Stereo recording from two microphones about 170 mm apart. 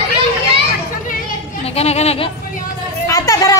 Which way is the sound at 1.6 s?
35° left (ahead or behind).